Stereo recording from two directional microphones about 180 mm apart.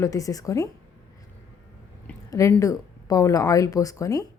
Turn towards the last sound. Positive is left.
turn(degrees=20)  # may be behind; listen again after turning